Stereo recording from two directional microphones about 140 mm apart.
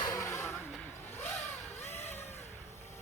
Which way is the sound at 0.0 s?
25° left (ahead or behind).